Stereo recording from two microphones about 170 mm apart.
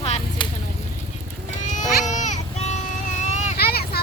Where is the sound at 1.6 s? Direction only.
45° left (ahead or behind).